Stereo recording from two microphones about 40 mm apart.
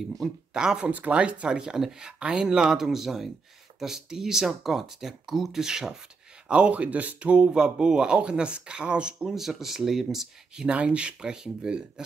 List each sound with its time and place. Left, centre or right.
0.5 s speech: centre
2.5 s speech: centre
6.4 s speech: right
7.5 s speech: centre
9.2 s speech: centre
10.7 s speech: right